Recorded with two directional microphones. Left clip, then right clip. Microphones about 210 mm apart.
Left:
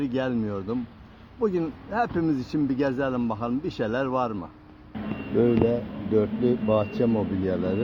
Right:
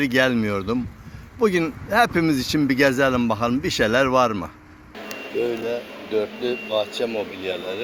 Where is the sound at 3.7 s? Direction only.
30° right (ahead or behind).